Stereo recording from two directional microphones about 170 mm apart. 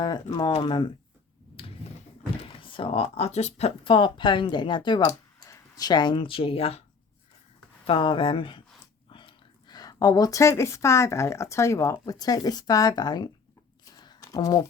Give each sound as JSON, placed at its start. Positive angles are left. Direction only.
{"t": 0.3, "sound": "speech", "side_deg": 30}
{"t": 2.4, "sound": "speech", "side_deg": 30}
{"t": 7.9, "sound": "speech", "side_deg": 30}
{"t": 13.9, "sound": "a sound", "side_deg": 25}